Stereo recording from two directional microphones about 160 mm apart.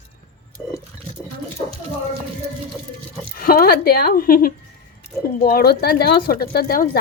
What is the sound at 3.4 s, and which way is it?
Speech, 65° left (ahead or behind).